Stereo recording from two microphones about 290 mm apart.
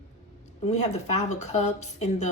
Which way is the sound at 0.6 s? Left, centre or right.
Left.